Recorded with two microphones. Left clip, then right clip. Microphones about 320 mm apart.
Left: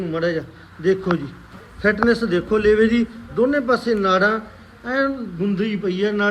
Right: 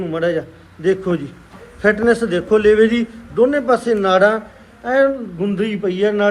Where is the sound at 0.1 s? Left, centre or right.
Centre.